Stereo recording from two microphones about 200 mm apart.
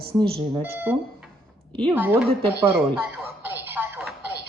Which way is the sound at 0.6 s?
10° right (ahead or behind).